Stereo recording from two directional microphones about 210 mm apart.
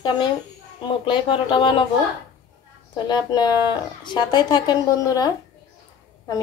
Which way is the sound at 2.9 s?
20° left (ahead or behind).